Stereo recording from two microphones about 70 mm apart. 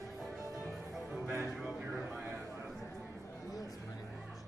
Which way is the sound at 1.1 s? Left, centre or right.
Right.